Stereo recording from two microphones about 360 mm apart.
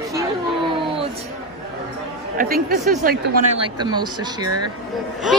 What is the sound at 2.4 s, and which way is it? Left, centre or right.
Speech, right.